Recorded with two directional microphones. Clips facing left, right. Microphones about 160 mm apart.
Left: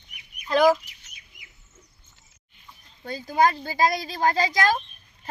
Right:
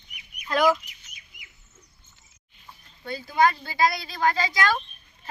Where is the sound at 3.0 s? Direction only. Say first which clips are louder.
Left 1 dB; 40° left (ahead or behind).